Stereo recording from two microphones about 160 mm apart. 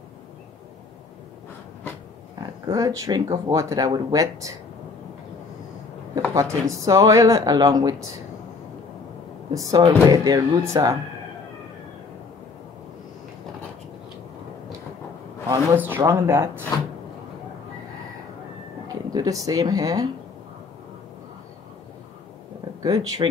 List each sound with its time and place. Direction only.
2.7 s speech: 20° right (ahead or behind)
6.1 s speech: 20° right (ahead or behind)
9.5 s speech: 20° right (ahead or behind)
15.4 s a man's voice: 15° right (ahead or behind)
18.9 s speech: 25° right (ahead or behind)
22.8 s speech: 25° right (ahead or behind)